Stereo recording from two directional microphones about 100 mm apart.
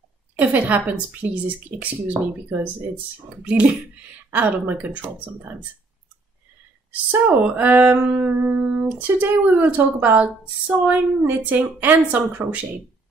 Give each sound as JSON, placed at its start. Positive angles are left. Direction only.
{"t": 0.4, "sound": "speech", "side_deg": -15}
{"t": 6.9, "sound": "speech", "side_deg": -20}